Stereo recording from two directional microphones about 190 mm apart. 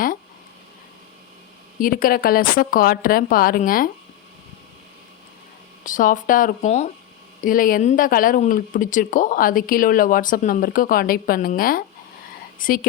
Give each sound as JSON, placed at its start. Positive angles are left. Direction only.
{"t": 1.8, "sound": "speech", "side_deg": 45}
{"t": 5.8, "sound": "speech", "side_deg": 45}